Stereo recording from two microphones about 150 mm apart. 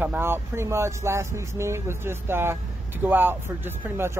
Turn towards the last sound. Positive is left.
turn(degrees=-15)  # may be behind; listen again after turning